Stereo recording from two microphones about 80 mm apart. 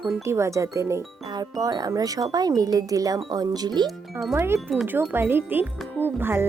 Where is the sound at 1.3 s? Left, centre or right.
Right.